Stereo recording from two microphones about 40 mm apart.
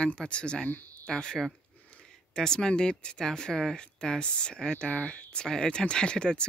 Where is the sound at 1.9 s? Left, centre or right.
Left.